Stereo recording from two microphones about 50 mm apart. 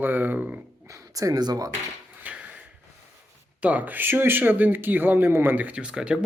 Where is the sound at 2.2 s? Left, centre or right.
Right.